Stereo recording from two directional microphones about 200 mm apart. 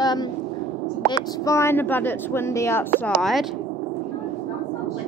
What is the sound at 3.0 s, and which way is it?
Speech, centre (ahead or behind).